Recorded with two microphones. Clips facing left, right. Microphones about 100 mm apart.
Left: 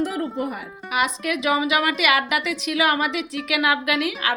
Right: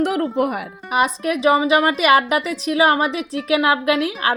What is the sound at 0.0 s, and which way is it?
Speech, 80° right.